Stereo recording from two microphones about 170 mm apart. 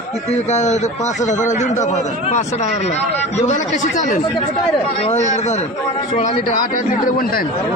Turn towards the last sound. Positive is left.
turn(degrees=55)  # may be behind; listen again after turning